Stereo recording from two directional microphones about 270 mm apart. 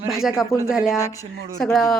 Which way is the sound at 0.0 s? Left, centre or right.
Centre.